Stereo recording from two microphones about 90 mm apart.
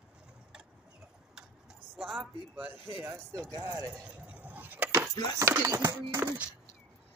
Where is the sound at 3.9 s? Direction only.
15° right (ahead or behind).